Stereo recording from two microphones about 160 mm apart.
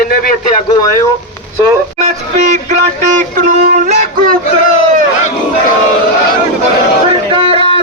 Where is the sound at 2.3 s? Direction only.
45° right (ahead or behind).